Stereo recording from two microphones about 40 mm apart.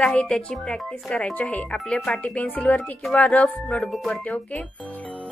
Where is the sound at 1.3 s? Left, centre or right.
Left.